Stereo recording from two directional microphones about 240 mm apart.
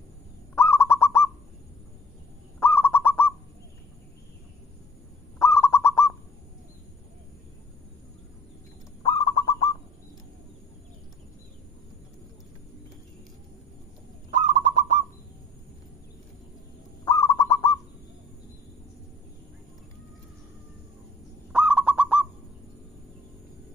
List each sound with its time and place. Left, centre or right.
0.6 s bird: centre
2.6 s bird: centre
5.4 s bird: centre
9.0 s bird: left
14.3 s bird: right
17.0 s bird: centre
21.5 s bird: centre